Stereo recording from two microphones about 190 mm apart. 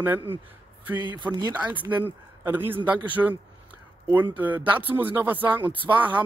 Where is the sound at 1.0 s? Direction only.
20° right (ahead or behind).